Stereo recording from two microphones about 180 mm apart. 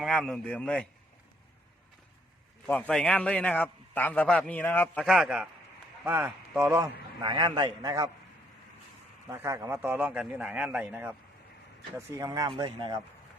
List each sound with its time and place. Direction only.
0.0 s a man's voice: centre (ahead or behind)
2.6 s a man's voice: 10° left (ahead or behind)
5.0 s a man's voice: centre (ahead or behind)
7.2 s speech: 20° right (ahead or behind)
9.2 s a man's voice: 15° right (ahead or behind)